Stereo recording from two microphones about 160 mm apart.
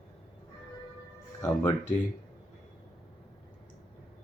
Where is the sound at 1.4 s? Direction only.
20° left (ahead or behind).